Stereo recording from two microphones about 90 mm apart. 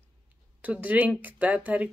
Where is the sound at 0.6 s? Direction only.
15° right (ahead or behind).